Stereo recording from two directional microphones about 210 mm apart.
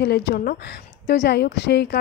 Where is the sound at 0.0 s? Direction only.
50° left (ahead or behind).